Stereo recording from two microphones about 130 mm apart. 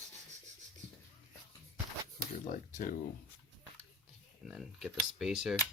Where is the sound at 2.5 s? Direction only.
90° left.